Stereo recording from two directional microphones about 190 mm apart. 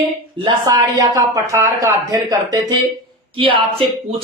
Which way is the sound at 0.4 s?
20° right (ahead or behind).